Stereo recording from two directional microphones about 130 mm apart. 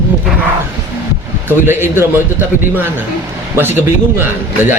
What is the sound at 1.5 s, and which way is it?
Speech, 15° right (ahead or behind).